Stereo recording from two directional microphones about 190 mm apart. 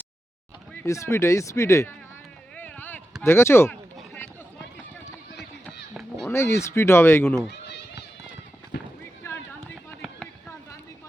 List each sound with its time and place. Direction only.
0.7 s speech: 10° left (ahead or behind)
2.6 s a sound: 10° left (ahead or behind)
3.2 s speech: 15° left (ahead or behind)
3.9 s run: 10° left (ahead or behind)
5.6 s a sound: centre (ahead or behind)
6.2 s speech: 15° left (ahead or behind)
7.5 s children playing: 65° left (ahead or behind)